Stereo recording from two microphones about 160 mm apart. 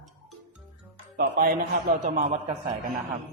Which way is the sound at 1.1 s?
65° right (ahead or behind).